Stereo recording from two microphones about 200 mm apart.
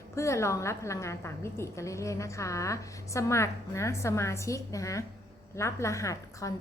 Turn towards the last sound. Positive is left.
turn(degrees=15)  # may be behind; listen again after turning